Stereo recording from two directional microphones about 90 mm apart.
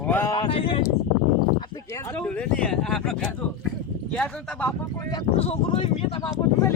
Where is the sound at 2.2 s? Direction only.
15° left (ahead or behind).